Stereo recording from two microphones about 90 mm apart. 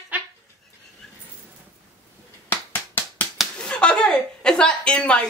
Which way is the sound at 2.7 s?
20° left (ahead or behind).